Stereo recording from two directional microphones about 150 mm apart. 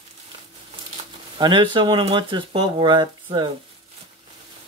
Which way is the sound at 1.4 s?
30° right (ahead or behind).